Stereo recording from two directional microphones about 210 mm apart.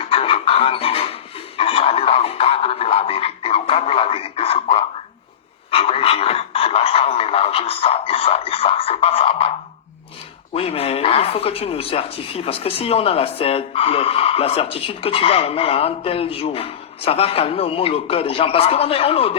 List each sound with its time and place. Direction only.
0.0 s music: 25° left (ahead or behind)
5.7 s radio: 30° left (ahead or behind)
10.5 s speech: 30° left (ahead or behind)